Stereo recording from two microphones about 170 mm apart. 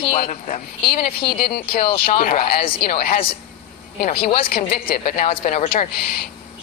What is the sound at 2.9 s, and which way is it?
Speech, 35° left (ahead or behind).